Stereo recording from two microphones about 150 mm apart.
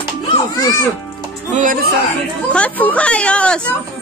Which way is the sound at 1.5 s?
60° right (ahead or behind).